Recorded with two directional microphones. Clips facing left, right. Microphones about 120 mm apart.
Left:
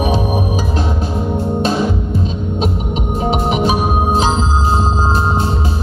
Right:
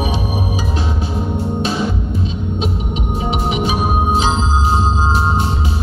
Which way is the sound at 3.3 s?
40° left (ahead or behind).